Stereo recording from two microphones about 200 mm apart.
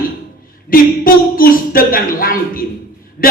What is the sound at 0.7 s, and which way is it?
A man's voice, 45° left (ahead or behind).